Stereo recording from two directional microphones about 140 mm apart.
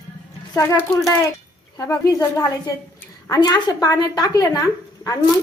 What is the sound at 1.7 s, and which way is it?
A woman's voice, 25° left (ahead or behind).